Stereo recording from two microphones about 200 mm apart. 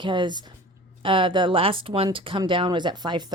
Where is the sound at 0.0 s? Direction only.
25° right (ahead or behind).